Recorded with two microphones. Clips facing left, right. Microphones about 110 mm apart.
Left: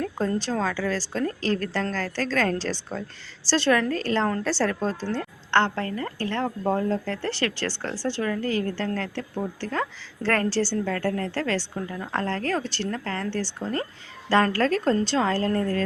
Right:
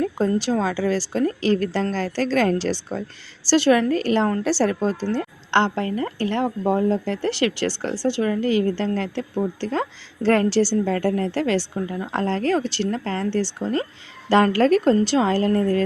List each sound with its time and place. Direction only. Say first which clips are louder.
0.3 s a woman's voice: right 5 dB; 10° right (ahead or behind)